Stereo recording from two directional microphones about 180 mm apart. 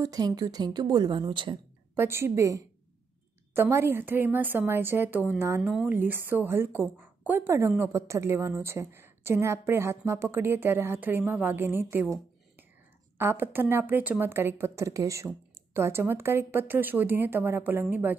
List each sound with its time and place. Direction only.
0.0 s a woman's voice: 20° right (ahead or behind)
2.0 s a woman's voice: 15° right (ahead or behind)
13.2 s a woman's voice: 10° right (ahead or behind)